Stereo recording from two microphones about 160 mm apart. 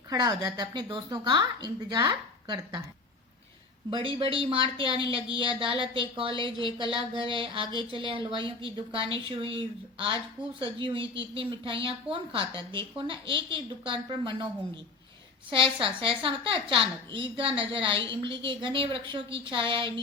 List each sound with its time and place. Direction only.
0.1 s a woman's voice: 25° right (ahead or behind)
3.8 s a woman's voice: 35° right (ahead or behind)
15.4 s a woman's voice: 35° right (ahead or behind)